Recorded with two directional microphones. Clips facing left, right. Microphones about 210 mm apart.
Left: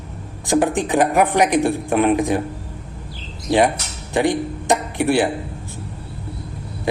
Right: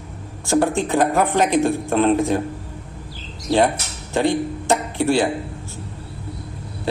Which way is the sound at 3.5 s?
15° left (ahead or behind).